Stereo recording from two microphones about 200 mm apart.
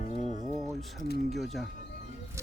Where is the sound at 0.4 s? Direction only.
Centre (ahead or behind).